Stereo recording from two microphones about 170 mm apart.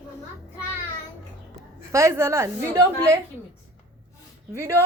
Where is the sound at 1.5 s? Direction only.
15° right (ahead or behind).